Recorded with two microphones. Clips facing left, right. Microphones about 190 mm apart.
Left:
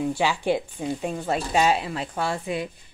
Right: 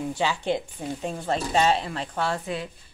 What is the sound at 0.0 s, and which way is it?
Speech, 10° left (ahead or behind).